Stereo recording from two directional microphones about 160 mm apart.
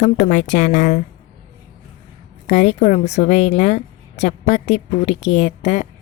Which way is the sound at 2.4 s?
45° left (ahead or behind).